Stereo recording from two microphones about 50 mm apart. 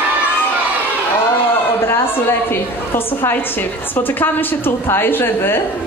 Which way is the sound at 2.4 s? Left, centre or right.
Left.